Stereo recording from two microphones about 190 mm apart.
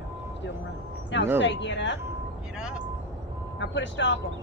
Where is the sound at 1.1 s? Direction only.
70° left (ahead or behind).